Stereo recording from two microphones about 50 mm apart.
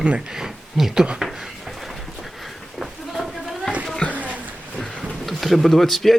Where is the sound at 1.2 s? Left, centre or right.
Centre.